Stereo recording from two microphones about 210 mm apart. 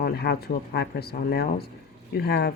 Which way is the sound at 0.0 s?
50° left (ahead or behind).